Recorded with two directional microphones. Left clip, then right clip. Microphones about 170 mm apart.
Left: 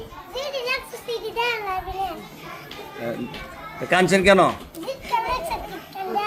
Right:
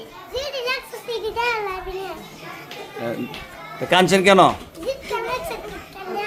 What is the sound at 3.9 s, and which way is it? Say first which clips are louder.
Speech: right 2 dB; 20° right (ahead or behind).